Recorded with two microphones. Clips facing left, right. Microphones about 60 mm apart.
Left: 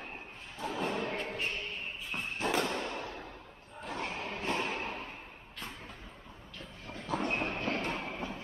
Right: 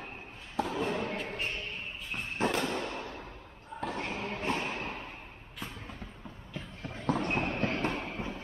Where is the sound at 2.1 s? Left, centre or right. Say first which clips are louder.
Left 1 dB; centre.